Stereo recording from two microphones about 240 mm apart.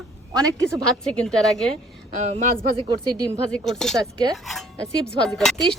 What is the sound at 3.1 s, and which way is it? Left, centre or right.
Speech, centre.